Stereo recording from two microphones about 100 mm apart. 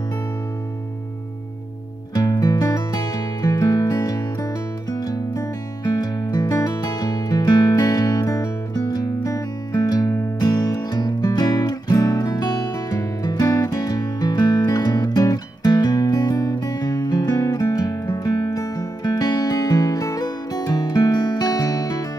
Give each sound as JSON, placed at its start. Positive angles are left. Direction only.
{"t": 2.1, "sound": "music", "side_deg": 40}